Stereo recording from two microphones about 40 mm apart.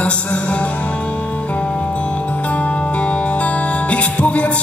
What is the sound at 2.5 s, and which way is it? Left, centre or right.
Music, left.